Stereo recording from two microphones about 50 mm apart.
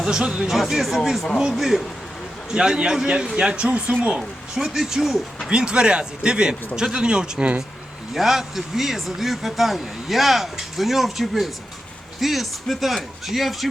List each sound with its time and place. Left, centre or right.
0.0 s speech: centre
0.4 s speech: centre; by 3.9 s right
4.2 s speech: centre
5.5 s speech: centre
8.1 s speech: centre